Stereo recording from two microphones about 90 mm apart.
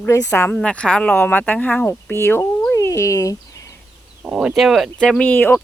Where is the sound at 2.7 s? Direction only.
35° left (ahead or behind).